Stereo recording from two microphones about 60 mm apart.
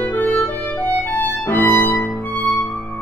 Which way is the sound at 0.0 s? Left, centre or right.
Left.